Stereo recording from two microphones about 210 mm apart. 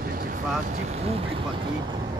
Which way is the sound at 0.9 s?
30° right (ahead or behind).